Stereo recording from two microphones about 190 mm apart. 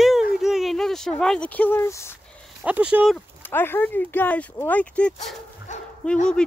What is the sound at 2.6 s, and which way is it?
Speech, 5° right (ahead or behind).